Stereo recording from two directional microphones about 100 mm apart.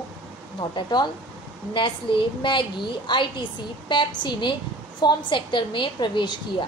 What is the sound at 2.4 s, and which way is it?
A woman's voice, 55° left (ahead or behind).